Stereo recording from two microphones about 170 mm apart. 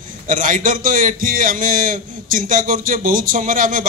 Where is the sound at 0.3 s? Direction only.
50° right (ahead or behind).